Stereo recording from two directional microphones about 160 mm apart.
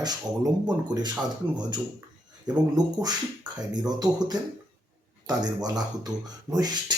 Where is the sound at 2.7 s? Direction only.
25° right (ahead or behind).